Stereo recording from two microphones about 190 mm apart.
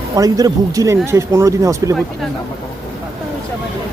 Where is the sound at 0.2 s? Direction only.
20° right (ahead or behind).